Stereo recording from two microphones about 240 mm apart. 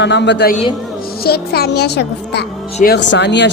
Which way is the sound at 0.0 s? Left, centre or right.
Left.